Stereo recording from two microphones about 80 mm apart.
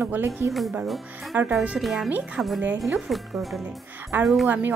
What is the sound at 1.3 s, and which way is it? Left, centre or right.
Speech, right.